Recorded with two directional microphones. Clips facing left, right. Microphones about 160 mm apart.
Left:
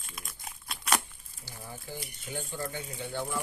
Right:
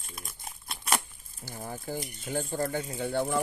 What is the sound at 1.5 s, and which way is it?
Speech, 45° right (ahead or behind).